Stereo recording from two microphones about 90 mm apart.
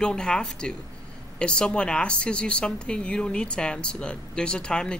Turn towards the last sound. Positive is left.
turn(degrees=10)  # may be behind; listen again after turning